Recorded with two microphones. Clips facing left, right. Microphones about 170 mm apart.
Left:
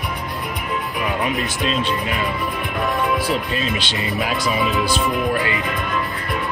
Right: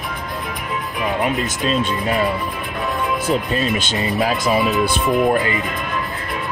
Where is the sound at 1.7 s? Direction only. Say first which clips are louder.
Right 4 dB; 35° right (ahead or behind).